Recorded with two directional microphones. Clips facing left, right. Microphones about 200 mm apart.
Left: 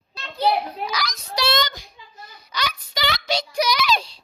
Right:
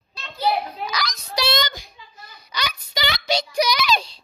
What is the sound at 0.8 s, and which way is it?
Speech, 10° left (ahead or behind).